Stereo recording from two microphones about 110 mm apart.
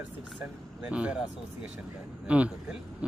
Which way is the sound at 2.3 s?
10° right (ahead or behind).